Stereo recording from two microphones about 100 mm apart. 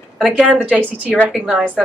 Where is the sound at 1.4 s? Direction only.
10° right (ahead or behind).